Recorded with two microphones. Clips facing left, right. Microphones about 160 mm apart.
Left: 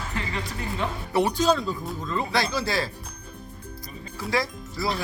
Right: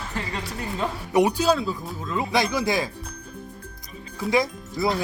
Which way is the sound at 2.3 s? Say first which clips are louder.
Right 4 dB; 15° right (ahead or behind).